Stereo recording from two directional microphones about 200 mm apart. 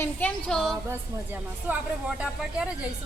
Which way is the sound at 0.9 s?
10° right (ahead or behind).